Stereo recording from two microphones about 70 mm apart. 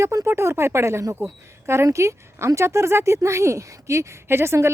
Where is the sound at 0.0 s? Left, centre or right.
Right.